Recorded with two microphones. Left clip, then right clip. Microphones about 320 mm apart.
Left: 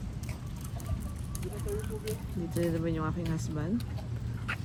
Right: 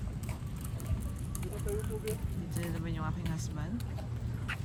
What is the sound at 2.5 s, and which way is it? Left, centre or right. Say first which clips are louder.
Speech: left 10 dB; centre.